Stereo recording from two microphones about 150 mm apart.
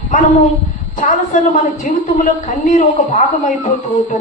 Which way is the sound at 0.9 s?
60° left (ahead or behind).